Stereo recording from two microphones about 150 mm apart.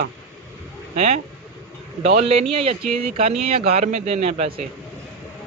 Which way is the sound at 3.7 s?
45° right (ahead or behind).